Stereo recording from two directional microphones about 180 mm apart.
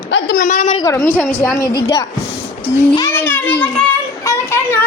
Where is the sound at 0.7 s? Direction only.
20° left (ahead or behind).